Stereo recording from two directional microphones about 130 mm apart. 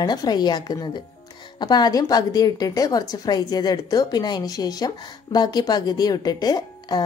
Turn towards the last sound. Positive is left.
turn(degrees=30)  # may be behind; listen again after turning